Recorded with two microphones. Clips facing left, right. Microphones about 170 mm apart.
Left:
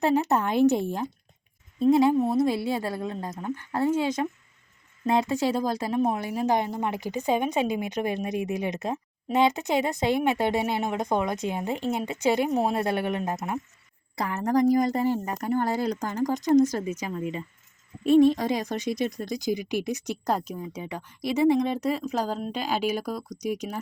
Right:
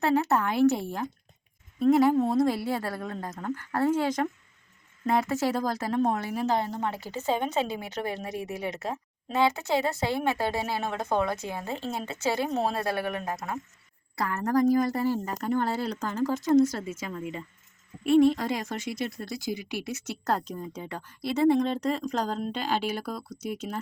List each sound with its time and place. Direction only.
0.0 s a woman's voice: 15° left (ahead or behind)